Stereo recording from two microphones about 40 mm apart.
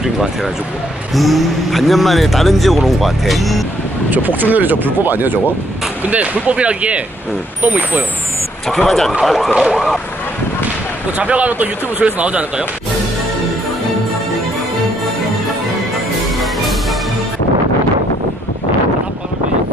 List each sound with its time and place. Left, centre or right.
1.1 s speech: centre
4.4 s speech: right
6.0 s speech: right
8.6 s speech: centre
11.1 s speech: right
12.0 s speech: right